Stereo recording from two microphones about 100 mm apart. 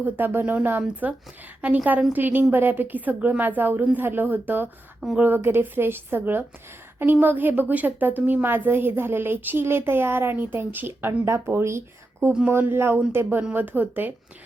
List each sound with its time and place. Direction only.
0.0 s a woman's voice: 20° right (ahead or behind)
4.9 s speech: centre (ahead or behind)
5.2 s a woman's voice: 20° right (ahead or behind)